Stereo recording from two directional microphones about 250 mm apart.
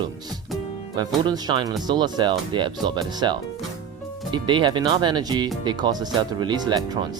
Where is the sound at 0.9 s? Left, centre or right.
Centre.